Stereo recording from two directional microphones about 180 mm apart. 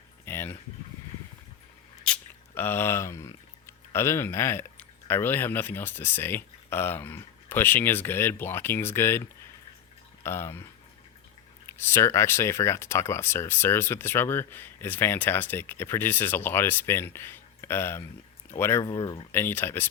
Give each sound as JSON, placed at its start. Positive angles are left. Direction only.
{"t": 0.3, "sound": "a sound", "side_deg": 10}
{"t": 2.1, "sound": "squish", "side_deg": 5}
{"t": 2.6, "sound": "speech", "side_deg": 10}
{"t": 10.2, "sound": "speech", "side_deg": 15}